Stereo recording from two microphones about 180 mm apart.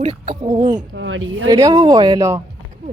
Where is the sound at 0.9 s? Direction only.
90° right.